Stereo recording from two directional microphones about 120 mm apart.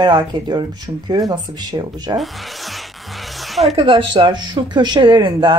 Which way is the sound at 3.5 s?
Centre (ahead or behind).